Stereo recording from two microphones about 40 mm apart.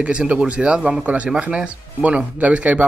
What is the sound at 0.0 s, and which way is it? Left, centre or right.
Speech, right.